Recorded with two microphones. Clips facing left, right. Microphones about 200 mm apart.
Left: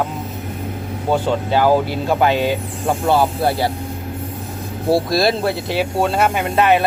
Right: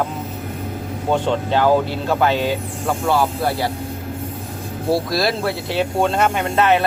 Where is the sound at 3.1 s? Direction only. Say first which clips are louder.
Left 3 dB; 25° left (ahead or behind).